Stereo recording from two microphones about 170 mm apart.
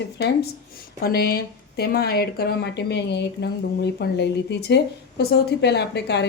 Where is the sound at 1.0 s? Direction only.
65° left (ahead or behind).